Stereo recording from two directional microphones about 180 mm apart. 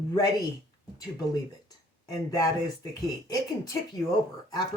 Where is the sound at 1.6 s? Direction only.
20° left (ahead or behind).